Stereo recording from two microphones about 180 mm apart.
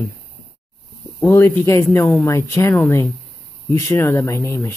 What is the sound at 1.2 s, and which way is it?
Speech, 15° left (ahead or behind).